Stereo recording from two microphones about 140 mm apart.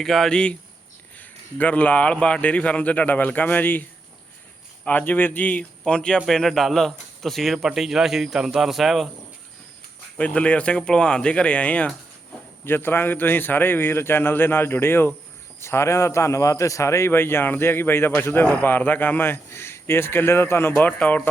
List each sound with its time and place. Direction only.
0.0 s a man's voice: centre (ahead or behind)
4.9 s a man's voice: 10° left (ahead or behind)
10.2 s a man's voice: 10° left (ahead or behind)